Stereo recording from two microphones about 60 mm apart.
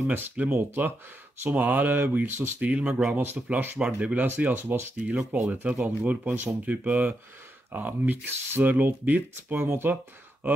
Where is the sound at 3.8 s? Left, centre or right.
Centre.